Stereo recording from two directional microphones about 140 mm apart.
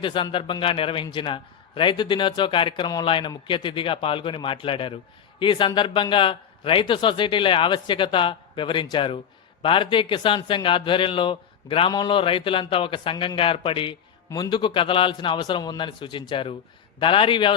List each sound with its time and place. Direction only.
0.0 s a man's voice: 35° left (ahead or behind)
14.3 s a man's voice: 25° left (ahead or behind)
14.5 s a man's voice: 35° left (ahead or behind)